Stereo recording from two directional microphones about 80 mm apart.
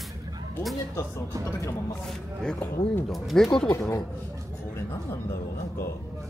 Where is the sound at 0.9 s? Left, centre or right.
Left.